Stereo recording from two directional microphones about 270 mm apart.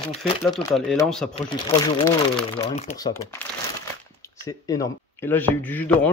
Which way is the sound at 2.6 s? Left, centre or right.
Left.